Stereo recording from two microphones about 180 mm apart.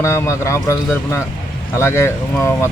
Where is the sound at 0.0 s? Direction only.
15° left (ahead or behind).